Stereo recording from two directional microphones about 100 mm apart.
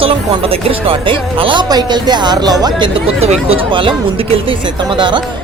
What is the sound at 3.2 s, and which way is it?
Speech, 85° right.